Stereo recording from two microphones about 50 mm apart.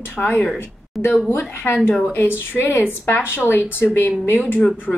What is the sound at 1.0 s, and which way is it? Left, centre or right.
Speech, centre.